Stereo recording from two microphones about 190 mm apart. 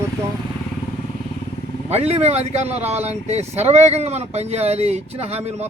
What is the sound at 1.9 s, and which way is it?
Speech, 35° right (ahead or behind).